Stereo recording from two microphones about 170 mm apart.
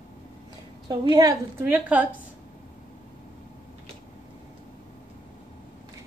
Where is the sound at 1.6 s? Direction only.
10° right (ahead or behind).